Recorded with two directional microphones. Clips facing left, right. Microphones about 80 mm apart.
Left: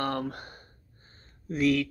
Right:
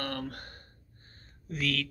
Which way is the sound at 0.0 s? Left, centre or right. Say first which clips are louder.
Left 6 dB; left.